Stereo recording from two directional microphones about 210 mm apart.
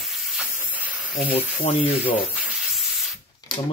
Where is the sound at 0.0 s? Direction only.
Centre (ahead or behind).